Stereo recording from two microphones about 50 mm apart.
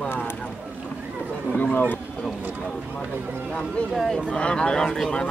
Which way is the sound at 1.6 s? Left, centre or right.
Left.